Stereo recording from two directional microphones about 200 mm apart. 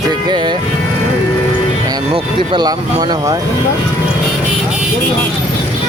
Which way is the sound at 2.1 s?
25° right (ahead or behind).